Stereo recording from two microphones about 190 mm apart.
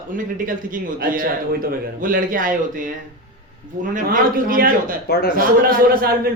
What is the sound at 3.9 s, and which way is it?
A man's voice, 45° right (ahead or behind).